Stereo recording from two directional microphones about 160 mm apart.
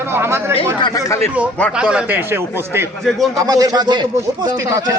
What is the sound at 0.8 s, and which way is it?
Speech, 25° left (ahead or behind).